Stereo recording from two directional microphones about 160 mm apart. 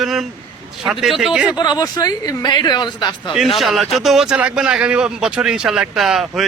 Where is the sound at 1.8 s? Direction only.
25° left (ahead or behind).